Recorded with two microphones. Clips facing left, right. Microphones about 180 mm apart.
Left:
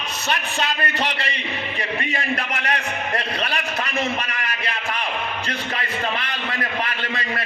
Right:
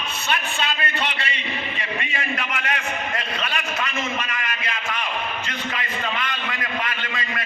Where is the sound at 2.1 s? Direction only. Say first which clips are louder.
Left 2 dB; 35° left (ahead or behind).